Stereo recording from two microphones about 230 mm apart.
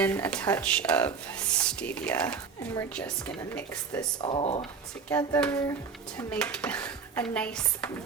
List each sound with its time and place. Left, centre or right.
0.0 s speech: centre
4.2 s speech: left
5.0 s hands: centre
6.1 s speech: centre